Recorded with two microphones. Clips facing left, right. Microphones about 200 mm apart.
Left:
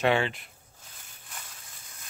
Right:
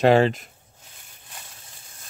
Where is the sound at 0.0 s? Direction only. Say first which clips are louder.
Right 8 dB; 40° right (ahead or behind).